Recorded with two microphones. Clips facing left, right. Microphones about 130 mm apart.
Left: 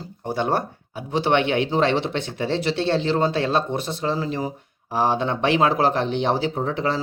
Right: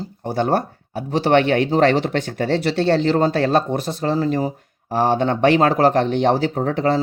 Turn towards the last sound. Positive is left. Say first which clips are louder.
# right 4 dB
turn(degrees=-40)  # may be behind; listen again after turning